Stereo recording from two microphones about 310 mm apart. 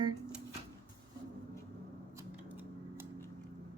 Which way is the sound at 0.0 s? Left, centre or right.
Centre.